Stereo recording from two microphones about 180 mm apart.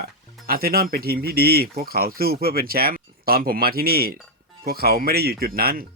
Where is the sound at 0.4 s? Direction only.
55° right (ahead or behind).